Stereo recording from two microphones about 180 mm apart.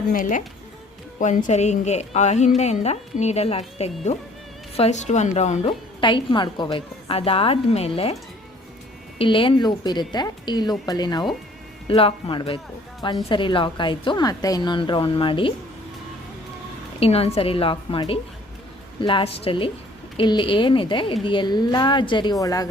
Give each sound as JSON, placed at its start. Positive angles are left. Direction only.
{"t": 0.1, "sound": "a woman's voice", "side_deg": 50}
{"t": 6.0, "sound": "a woman's voice", "side_deg": 25}
{"t": 9.1, "sound": "a woman's voice", "side_deg": 30}
{"t": 17.0, "sound": "a woman's voice", "side_deg": 35}